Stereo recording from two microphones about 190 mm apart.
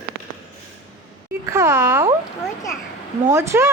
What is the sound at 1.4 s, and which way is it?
Speech, 15° right (ahead or behind).